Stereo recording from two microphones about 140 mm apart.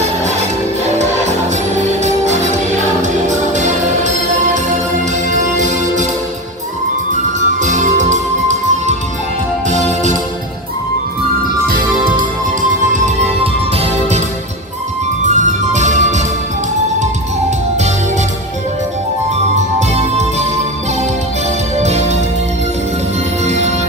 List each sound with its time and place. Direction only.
1.7 s music: 55° right (ahead or behind)
5.3 s music: 60° right (ahead or behind)
7.3 s music: 60° right (ahead or behind)
11.7 s music: 85° right
12.9 s music: 55° right (ahead or behind)
15.2 s music: 60° right (ahead or behind)
19.5 s music: 55° right (ahead or behind)
21.8 s music: 50° right (ahead or behind)
23.5 s music: 55° right (ahead or behind)